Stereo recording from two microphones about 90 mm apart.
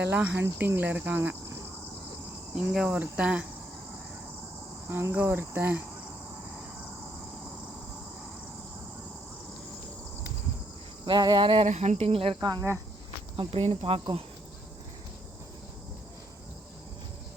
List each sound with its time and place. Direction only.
0.0 s cricket: 20° right (ahead or behind)
2.6 s cricket: 10° right (ahead or behind)
4.9 s cricket: 25° right (ahead or behind)
11.0 s cricket: 55° right (ahead or behind); by 12.4 s 90° right
12.4 s cricket: 50° right (ahead or behind)
13.3 s speech: 80° right